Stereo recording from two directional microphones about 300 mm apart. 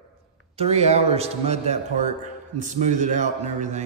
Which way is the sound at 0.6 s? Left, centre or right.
Right.